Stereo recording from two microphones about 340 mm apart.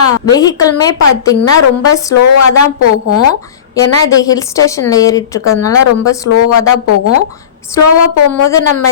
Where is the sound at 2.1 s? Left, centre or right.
Left.